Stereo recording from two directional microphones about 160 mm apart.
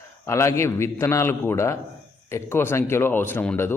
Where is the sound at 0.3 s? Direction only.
15° left (ahead or behind).